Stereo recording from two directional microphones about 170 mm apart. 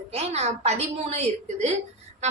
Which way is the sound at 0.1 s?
40° right (ahead or behind).